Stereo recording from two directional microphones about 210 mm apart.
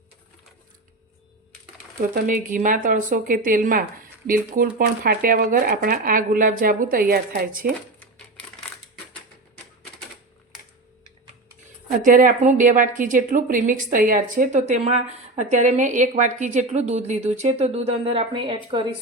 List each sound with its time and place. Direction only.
2.1 s a woman's voice: 40° right (ahead or behind)
12.0 s a woman's voice: 40° right (ahead or behind); by 18.9 s 25° right (ahead or behind)